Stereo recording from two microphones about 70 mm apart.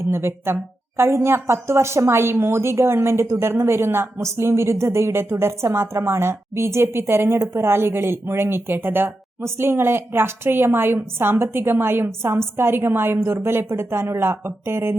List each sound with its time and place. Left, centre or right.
0.1 s speech: right